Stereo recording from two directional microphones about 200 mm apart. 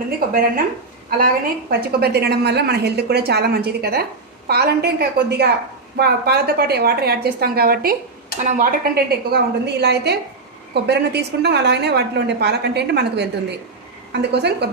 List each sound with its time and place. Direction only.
1.1 s a woman's voice: 50° right (ahead or behind)